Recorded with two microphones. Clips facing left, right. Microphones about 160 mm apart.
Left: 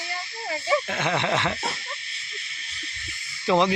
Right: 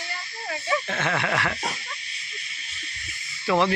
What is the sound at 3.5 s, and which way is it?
Rub, 15° left (ahead or behind).